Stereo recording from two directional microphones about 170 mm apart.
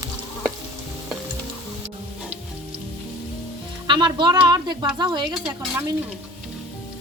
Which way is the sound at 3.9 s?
25° right (ahead or behind).